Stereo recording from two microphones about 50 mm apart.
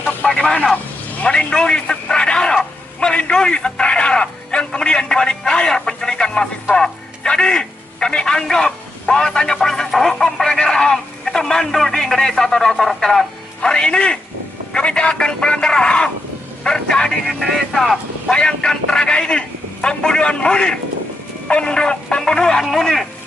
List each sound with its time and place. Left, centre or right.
0.3 s vehicle: centre
1.2 s a man's voice: centre
2.5 s a sound: centre
14.7 s a man's voice: left
17.3 s speech: centre
18.3 s a man's voice: centre